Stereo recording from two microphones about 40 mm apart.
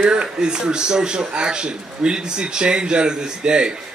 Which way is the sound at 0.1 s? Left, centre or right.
Right.